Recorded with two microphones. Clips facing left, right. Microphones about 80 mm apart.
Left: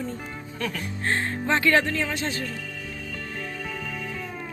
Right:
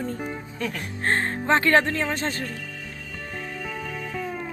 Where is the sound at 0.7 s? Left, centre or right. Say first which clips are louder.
Right 3 dB; right.